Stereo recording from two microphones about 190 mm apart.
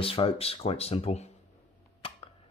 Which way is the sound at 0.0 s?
30° left (ahead or behind).